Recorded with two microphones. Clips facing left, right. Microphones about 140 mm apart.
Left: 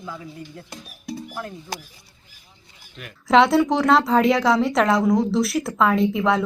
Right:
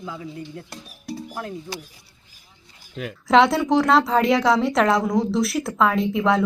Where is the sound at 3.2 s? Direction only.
Centre (ahead or behind).